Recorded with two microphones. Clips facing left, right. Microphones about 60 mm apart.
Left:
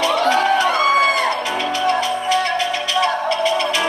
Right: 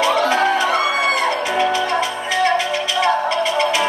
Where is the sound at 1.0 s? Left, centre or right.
Right.